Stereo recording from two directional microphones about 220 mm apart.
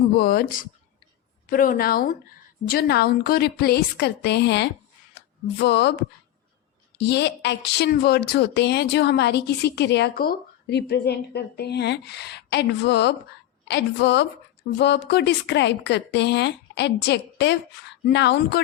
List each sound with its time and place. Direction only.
0.2 s a woman's voice: 45° left (ahead or behind)
7.0 s a woman's voice: 50° left (ahead or behind)